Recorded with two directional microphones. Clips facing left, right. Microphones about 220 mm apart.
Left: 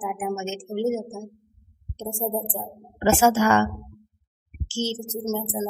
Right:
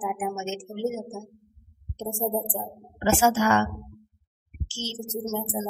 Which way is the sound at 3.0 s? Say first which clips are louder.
Left 3 dB; 60° left (ahead or behind).